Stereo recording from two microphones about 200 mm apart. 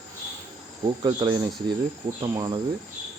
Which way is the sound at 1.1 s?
20° right (ahead or behind).